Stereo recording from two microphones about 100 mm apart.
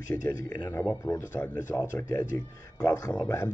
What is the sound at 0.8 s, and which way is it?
Speech, 20° left (ahead or behind).